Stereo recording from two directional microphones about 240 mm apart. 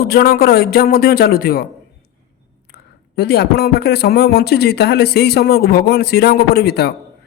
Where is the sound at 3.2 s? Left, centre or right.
Left.